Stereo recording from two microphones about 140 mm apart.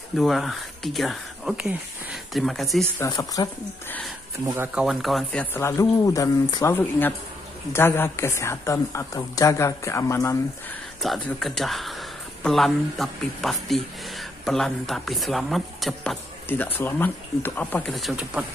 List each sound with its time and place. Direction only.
0.2 s speech: centre (ahead or behind)
3.1 s a woman's voice: 25° left (ahead or behind)
4.6 s speech: 5° right (ahead or behind)
5.4 s a woman's voice: 20° left (ahead or behind)
11.2 s speech: 5° left (ahead or behind)
16.4 s speech: 15° left (ahead or behind)
17.9 s speech: 5° right (ahead or behind)